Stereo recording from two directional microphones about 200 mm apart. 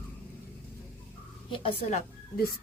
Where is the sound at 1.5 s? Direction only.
25° left (ahead or behind).